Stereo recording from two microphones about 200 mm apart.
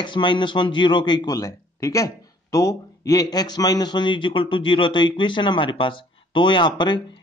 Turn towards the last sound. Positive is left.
turn(degrees=20)  # may be behind; listen again after turning